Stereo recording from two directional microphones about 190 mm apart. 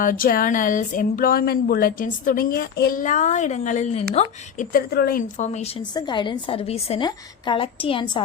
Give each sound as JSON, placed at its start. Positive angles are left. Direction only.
{"t": 0.0, "sound": "speech", "side_deg": 45}
{"t": 4.7, "sound": "speech", "side_deg": 55}
{"t": 5.9, "sound": "a woman's voice", "side_deg": 20}